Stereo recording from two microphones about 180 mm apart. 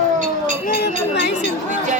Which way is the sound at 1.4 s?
45° right (ahead or behind).